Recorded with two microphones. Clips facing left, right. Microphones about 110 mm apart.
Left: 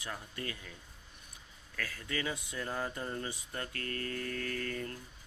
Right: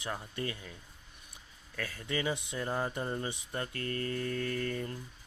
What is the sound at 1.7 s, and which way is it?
Speech, 25° right (ahead or behind).